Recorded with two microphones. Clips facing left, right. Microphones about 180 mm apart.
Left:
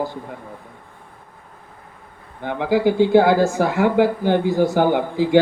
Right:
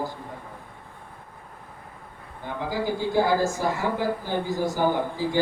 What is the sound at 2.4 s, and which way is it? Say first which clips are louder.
Speech: left 10 dB; 70° left (ahead or behind).